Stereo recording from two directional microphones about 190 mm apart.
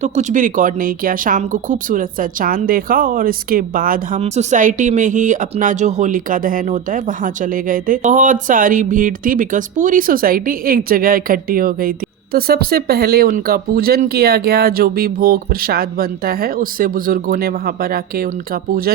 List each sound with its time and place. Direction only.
0.0 s speech: 40° right (ahead or behind)